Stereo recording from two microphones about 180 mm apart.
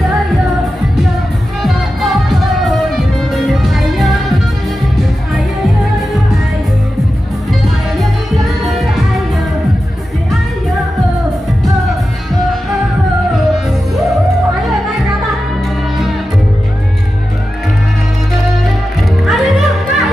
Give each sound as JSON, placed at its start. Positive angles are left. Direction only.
{"t": 1.6, "sound": "music", "side_deg": 0}
{"t": 8.0, "sound": "music", "side_deg": 0}
{"t": 19.2, "sound": "music", "side_deg": 0}